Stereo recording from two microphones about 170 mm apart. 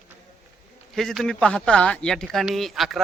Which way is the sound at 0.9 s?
Centre (ahead or behind).